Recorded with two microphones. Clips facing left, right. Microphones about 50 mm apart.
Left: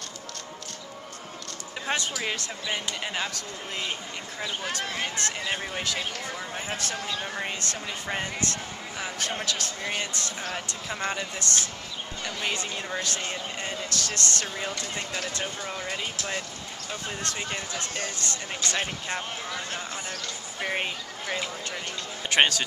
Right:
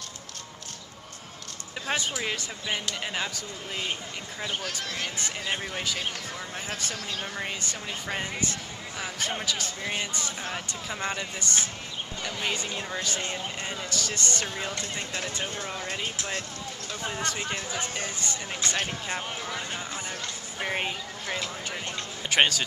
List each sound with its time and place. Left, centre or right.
1.9 s speech: centre
4.8 s speech: centre
5.1 s speech: centre
5.5 s speech: centre
7.0 s speech: left
7.6 s speech: centre
15.6 s speech: centre
17.1 s speech: centre